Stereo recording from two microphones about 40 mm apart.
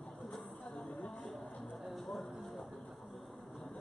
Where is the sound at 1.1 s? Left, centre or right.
Centre.